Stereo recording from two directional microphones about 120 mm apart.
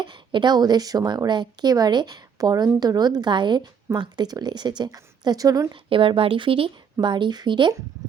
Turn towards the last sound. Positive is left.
turn(degrees=-40)  # may be behind; listen again after turning